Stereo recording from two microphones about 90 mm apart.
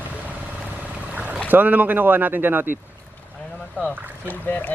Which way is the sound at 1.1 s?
15° right (ahead or behind).